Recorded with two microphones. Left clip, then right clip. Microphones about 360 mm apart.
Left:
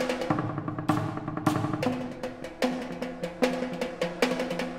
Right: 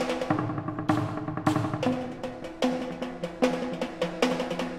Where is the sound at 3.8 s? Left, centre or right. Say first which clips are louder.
Even; left.